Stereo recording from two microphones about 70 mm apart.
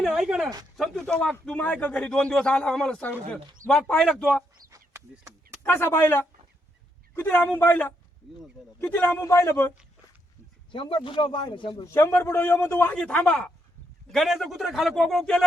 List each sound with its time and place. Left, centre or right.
0.1 s speech: centre
0.8 s speech: centre
1.5 s a man's voice: left
5.6 s a man's voice: left
9.2 s speech: left
11.4 s a man's voice: left
11.9 s a man's voice: left
12.9 s speech: centre
14.1 s speech: centre